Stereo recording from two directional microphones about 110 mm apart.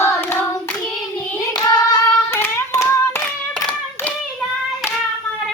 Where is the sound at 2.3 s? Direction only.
25° left (ahead or behind).